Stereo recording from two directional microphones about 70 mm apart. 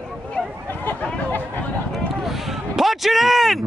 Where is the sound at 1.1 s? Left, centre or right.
Left.